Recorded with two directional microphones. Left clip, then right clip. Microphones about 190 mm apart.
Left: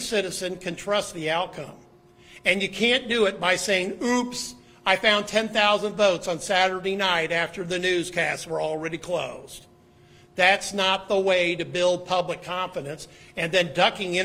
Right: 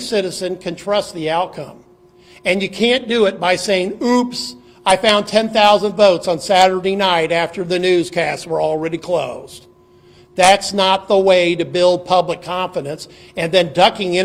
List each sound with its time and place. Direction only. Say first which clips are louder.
0.1 s speech: right 8 dB; 40° right (ahead or behind)
10.3 s speech: right 9 dB; 40° right (ahead or behind)